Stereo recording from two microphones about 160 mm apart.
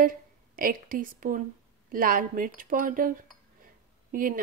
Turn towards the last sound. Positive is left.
turn(degrees=-60)  # may be behind; listen again after turning